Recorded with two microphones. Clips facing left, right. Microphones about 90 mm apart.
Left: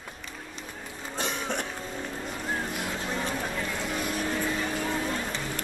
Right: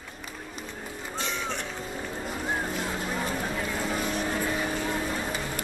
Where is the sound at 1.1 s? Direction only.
55° left (ahead or behind).